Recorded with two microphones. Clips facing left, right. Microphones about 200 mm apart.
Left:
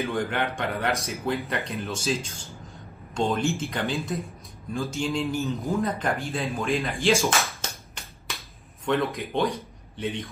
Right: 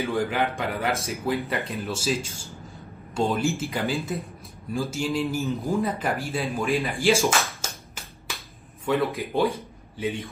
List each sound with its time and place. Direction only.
0.0 s speech: centre (ahead or behind)
3.2 s speech: 5° right (ahead or behind)
6.8 s a sound: centre (ahead or behind)
8.8 s a man's voice: 5° right (ahead or behind)